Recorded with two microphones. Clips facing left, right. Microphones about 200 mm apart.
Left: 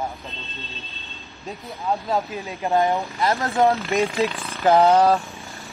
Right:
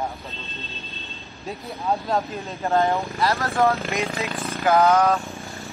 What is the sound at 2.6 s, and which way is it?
Speech, 15° left (ahead or behind).